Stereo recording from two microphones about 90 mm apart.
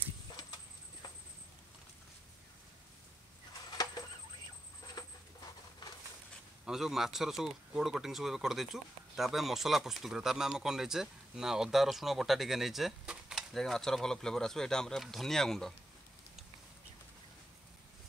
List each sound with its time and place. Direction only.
3.7 s fowl: 50° left (ahead or behind)
4.9 s a sound: 45° left (ahead or behind)
6.6 s speech: 5° right (ahead or behind)